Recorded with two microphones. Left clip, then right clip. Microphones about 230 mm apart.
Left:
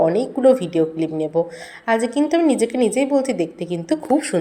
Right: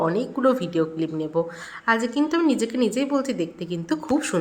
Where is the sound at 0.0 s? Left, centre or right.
Centre.